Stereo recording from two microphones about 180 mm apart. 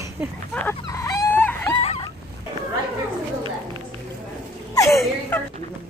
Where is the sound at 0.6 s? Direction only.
15° left (ahead or behind).